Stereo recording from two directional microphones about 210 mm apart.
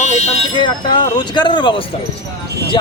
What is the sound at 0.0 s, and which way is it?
Speech, 30° left (ahead or behind).